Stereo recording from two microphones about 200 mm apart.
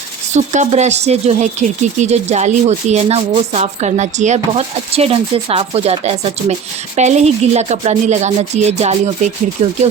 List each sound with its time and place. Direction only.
0.3 s speech: 35° right (ahead or behind)